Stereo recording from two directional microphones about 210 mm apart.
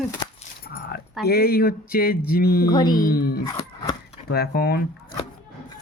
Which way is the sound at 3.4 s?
20° left (ahead or behind).